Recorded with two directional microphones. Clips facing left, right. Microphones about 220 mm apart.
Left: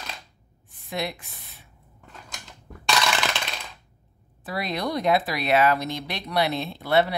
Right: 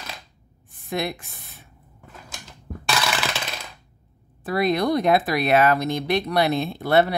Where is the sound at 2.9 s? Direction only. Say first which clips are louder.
Even; 5° right (ahead or behind).